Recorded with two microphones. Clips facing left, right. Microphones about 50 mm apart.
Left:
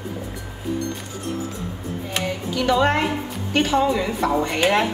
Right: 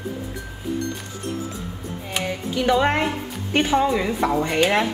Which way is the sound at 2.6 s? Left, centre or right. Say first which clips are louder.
Even; centre.